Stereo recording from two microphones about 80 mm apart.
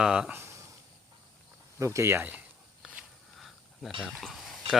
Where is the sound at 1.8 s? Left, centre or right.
Right.